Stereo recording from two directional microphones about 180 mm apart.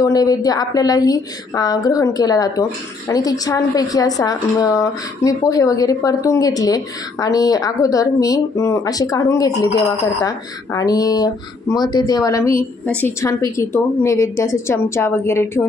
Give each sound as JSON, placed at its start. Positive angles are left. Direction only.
{"t": 0.0, "sound": "a woman's voice", "side_deg": 20}